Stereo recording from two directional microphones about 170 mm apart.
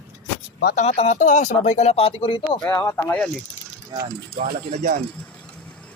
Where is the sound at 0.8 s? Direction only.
40° left (ahead or behind).